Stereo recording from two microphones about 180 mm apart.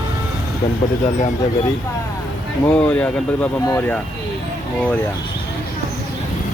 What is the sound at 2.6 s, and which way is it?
Speech, 10° left (ahead or behind).